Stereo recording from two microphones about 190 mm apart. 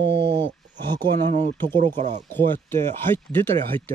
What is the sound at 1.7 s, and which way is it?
Speech, 40° right (ahead or behind).